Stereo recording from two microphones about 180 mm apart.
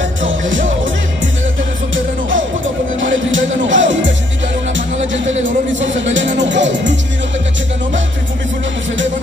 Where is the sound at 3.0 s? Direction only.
90° right.